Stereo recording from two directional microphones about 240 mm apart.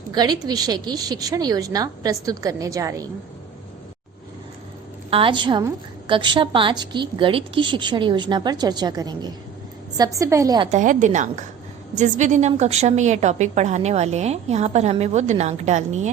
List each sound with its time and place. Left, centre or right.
0.1 s a woman's voice: centre
5.1 s a woman's voice: right
10.7 s a woman's voice: right